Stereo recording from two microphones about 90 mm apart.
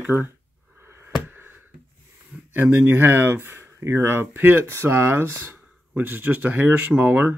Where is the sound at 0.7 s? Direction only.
25° right (ahead or behind).